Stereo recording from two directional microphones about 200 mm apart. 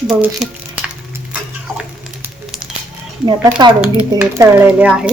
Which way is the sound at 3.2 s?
20° right (ahead or behind).